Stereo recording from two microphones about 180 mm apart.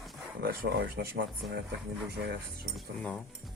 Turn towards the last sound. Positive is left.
turn(degrees=5)  # may be behind; listen again after turning